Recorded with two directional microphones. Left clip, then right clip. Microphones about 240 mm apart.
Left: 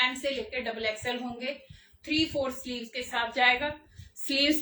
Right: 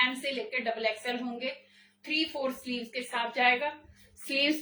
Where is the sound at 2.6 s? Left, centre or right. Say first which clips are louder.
Even; centre.